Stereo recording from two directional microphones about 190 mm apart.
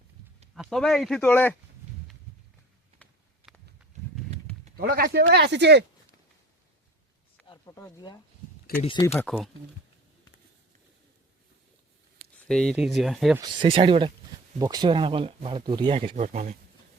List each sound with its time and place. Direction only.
0.5 s speech: centre (ahead or behind)
3.0 s a sound: centre (ahead or behind)
4.8 s speech: 55° right (ahead or behind)
5.2 s speech: 65° right (ahead or behind)
7.4 s speech: 20° left (ahead or behind)
8.8 s speech: 30° left (ahead or behind)
12.3 s speech: 5° left (ahead or behind)
13.6 s speech: 25° right (ahead or behind)
16.1 s speech: 40° right (ahead or behind)